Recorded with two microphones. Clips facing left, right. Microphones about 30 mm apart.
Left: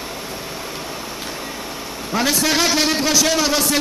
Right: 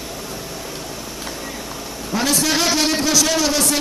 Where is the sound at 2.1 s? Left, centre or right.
Centre.